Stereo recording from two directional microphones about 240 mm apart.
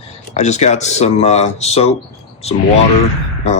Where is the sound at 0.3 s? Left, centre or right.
Left.